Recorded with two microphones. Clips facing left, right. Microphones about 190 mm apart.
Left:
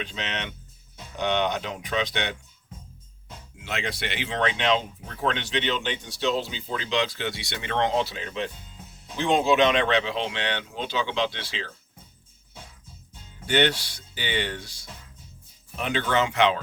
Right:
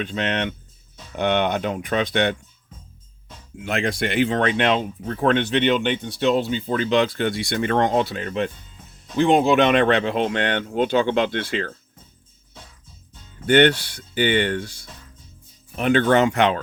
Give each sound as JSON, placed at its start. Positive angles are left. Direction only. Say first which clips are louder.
{"t": 0.0, "sound": "speech", "louder": "right 9 dB", "side_deg": -55}
{"t": 3.6, "sound": "speech", "louder": "right 8 dB", "side_deg": -50}
{"t": 13.4, "sound": "speech", "louder": "right 7 dB", "side_deg": -55}